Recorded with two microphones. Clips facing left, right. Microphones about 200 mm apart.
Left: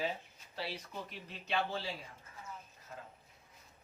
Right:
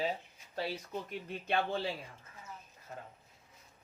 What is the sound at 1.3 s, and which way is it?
Speech, 55° right (ahead or behind).